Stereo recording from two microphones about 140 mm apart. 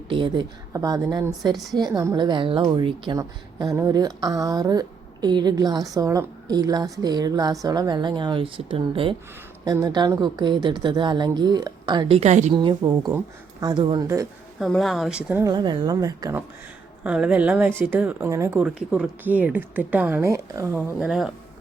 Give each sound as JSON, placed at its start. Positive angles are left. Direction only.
{"t": 0.1, "sound": "speech", "side_deg": -35}
{"t": 0.7, "sound": "speech", "side_deg": -25}
{"t": 3.2, "sound": "speech", "side_deg": -25}
{"t": 9.6, "sound": "speech", "side_deg": -25}
{"t": 12.5, "sound": "speech", "side_deg": -30}
{"t": 14.6, "sound": "speech", "side_deg": 0}
{"t": 15.4, "sound": "speech", "side_deg": -30}
{"t": 17.0, "sound": "a woman's voice", "side_deg": -10}
{"t": 18.6, "sound": "a woman's voice", "side_deg": -5}
{"t": 21.1, "sound": "speech", "side_deg": -5}